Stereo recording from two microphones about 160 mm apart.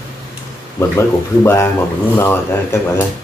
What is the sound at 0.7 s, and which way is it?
Speech, 15° left (ahead or behind).